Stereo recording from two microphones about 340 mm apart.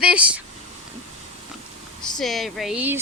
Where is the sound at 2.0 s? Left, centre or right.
Centre.